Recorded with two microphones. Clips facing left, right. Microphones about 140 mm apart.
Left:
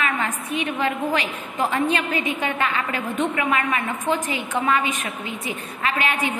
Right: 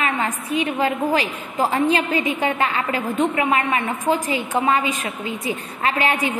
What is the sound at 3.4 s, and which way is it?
Speech, 30° right (ahead or behind).